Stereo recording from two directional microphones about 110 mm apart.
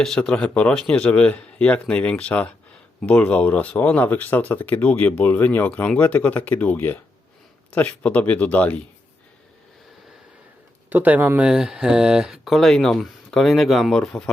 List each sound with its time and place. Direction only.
0.0 s speech: 5° left (ahead or behind)
10.8 s speech: 15° right (ahead or behind)
11.4 s speech: 5° right (ahead or behind)